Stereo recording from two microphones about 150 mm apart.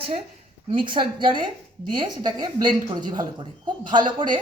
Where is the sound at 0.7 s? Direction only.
35° right (ahead or behind).